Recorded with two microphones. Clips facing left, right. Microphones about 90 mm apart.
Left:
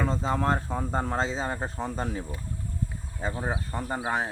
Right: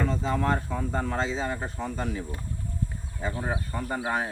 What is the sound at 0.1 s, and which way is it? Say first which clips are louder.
Speech: even; 30° left (ahead or behind).